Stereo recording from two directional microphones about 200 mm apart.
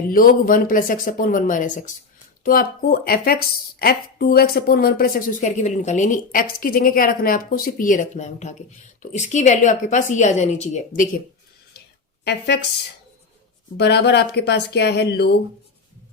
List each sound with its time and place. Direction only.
0.1 s a woman's voice: 45° left (ahead or behind)
12.2 s speech: 55° left (ahead or behind)
13.7 s speech: 55° left (ahead or behind)